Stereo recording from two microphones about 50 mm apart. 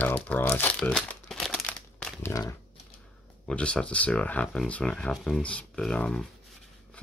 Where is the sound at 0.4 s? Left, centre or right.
Left.